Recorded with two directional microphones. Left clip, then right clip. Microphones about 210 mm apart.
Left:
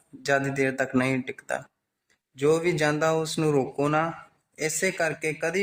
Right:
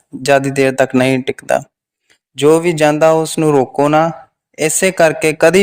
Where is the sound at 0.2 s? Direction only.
40° right (ahead or behind).